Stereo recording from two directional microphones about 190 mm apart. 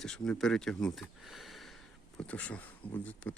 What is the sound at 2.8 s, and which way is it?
Speech, 30° left (ahead or behind).